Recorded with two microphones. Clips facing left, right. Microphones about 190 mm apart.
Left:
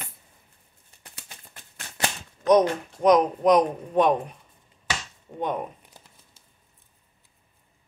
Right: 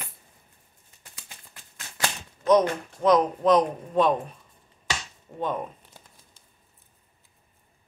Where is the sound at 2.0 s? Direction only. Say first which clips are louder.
Left 1 dB; 20° left (ahead or behind).